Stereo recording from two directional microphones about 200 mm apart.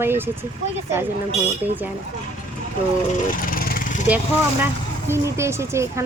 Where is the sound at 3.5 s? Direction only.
45° left (ahead or behind).